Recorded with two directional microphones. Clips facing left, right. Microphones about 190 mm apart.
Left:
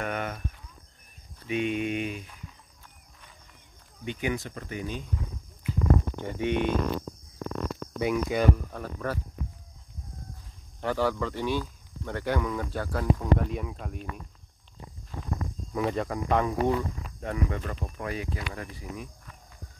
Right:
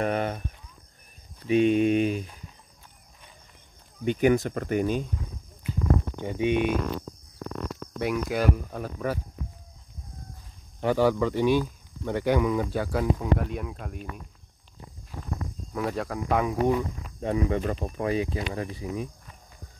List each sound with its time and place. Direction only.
0.0 s speech: 35° right (ahead or behind)
1.5 s speech: 35° right (ahead or behind)
4.0 s speech: 45° right (ahead or behind)
6.1 s speech: 15° right (ahead or behind)
8.0 s speech: centre (ahead or behind)
10.8 s speech: 15° right (ahead or behind)
15.7 s speech: centre (ahead or behind); by 19.3 s 25° right (ahead or behind)